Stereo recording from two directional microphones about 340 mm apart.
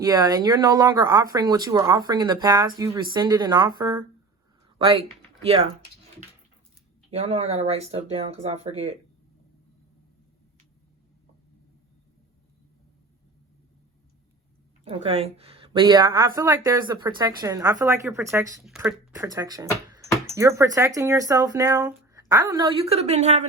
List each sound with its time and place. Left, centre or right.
0.0 s a woman's voice: centre
5.4 s speech: centre
7.1 s a woman's voice: centre
14.8 s a woman's voice: centre